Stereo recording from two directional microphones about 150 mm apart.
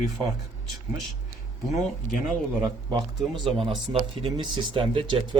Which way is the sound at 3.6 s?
40° right (ahead or behind).